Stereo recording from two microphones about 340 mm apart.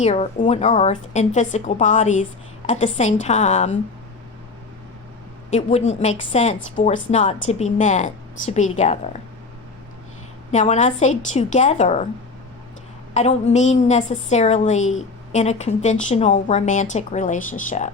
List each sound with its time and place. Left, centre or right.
0.0 s speech: centre
5.5 s speech: centre
10.5 s speech: left
13.1 s speech: centre